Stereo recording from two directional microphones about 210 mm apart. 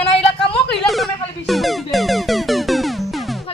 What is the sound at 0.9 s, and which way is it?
Speech, centre (ahead or behind).